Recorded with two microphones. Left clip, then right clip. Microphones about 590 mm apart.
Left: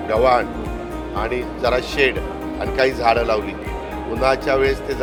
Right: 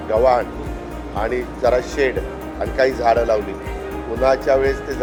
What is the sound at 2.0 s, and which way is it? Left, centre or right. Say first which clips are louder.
Speech: left 5 dB; left.